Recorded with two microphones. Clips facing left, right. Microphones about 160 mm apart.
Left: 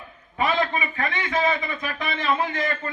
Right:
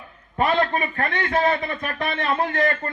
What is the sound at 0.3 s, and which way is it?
A man's voice, 55° right (ahead or behind).